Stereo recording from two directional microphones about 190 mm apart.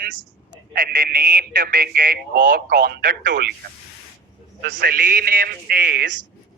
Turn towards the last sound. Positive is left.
turn(degrees=-50)  # may be behind; listen again after turning